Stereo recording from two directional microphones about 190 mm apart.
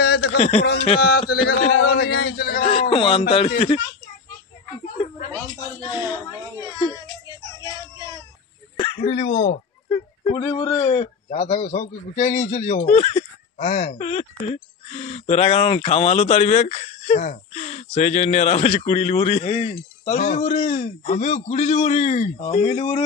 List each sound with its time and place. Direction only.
0.0 s a sound: 60° left (ahead or behind)
0.4 s speech: 35° left (ahead or behind)
1.0 s a man's voice: 55° left (ahead or behind)
2.7 s speech: 30° left (ahead or behind)
6.8 s baby cry: 20° left (ahead or behind)
8.7 s speech: 30° left (ahead or behind)
9.8 s speech: 25° left (ahead or behind)